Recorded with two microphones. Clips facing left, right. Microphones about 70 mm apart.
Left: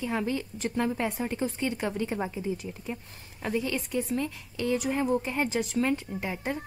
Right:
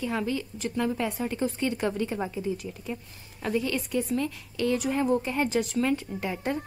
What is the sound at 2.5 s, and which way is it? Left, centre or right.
Speech, left.